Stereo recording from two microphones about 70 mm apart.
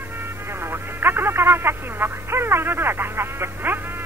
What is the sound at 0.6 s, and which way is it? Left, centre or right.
Speech, right.